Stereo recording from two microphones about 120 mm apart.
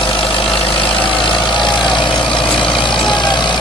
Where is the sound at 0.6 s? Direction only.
45° left (ahead or behind).